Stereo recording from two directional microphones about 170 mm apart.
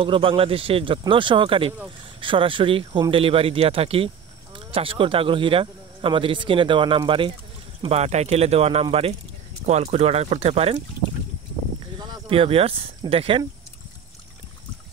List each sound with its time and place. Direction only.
0.0 s speech: 30° right (ahead or behind)
12.0 s speech: 30° right (ahead or behind)